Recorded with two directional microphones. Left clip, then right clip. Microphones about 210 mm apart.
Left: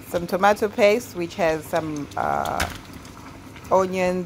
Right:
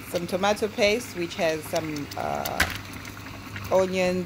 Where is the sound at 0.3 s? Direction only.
15° left (ahead or behind).